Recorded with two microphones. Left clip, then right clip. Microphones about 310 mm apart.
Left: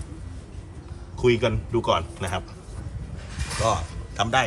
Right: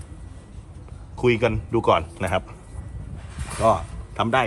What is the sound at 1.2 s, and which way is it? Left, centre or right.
A man's voice, centre.